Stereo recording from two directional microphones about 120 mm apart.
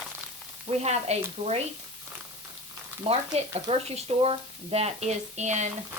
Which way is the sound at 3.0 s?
55° right (ahead or behind).